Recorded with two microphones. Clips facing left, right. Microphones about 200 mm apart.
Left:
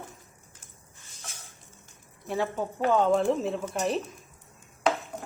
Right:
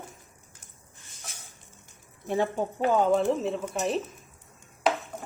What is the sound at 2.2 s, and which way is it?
Speech, 20° right (ahead or behind).